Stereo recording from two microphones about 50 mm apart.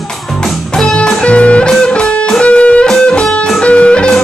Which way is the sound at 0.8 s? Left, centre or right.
Centre.